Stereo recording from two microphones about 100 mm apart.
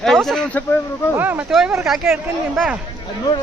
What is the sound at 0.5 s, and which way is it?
Speech, 15° left (ahead or behind).